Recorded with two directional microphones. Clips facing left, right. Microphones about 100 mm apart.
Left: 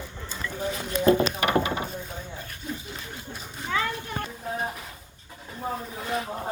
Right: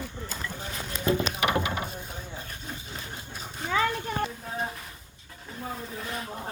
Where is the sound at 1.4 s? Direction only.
35° left (ahead or behind).